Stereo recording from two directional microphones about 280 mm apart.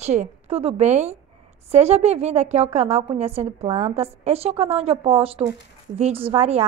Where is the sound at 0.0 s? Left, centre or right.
Right.